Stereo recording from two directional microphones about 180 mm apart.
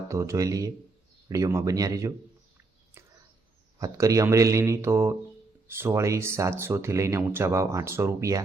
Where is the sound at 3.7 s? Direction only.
20° right (ahead or behind).